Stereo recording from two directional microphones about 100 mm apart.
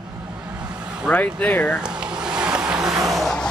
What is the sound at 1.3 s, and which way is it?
Speech, 15° left (ahead or behind).